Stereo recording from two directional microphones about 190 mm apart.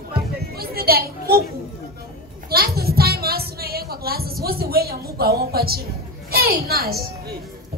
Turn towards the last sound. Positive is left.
turn(degrees=-55)  # may be behind; listen again after turning